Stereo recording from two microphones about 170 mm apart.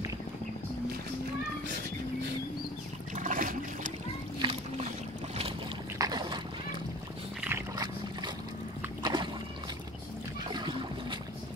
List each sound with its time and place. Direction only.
3.2 s water: 55° right (ahead or behind)
4.4 s boat: 35° right (ahead or behind)
5.9 s a sound: 25° right (ahead or behind)
7.4 s boat: 20° right (ahead or behind)
9.0 s a sound: 25° right (ahead or behind)
10.5 s boat: 25° right (ahead or behind)